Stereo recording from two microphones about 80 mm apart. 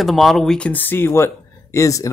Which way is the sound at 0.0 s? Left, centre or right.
Centre.